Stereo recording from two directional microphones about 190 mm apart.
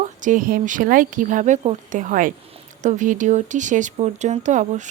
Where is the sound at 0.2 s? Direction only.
45° right (ahead or behind).